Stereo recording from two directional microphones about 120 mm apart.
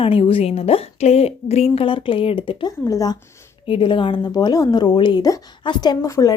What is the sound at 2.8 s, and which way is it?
Speech, 30° left (ahead or behind).